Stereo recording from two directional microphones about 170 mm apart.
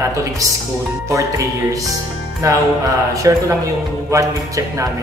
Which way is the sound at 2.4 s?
20° right (ahead or behind).